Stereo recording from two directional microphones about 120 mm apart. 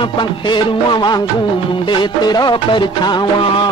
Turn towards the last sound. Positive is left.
turn(degrees=40)  # may be behind; listen again after turning